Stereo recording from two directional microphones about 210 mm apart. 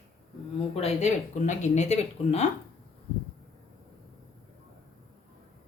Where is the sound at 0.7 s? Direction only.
30° left (ahead or behind).